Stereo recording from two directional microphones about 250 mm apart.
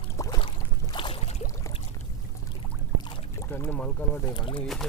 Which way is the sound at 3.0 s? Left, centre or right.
Centre.